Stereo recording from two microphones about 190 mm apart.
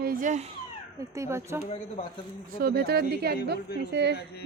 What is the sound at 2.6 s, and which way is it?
Speech, 55° right (ahead or behind).